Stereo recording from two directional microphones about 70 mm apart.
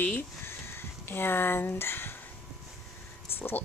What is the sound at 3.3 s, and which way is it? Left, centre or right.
Speech, left.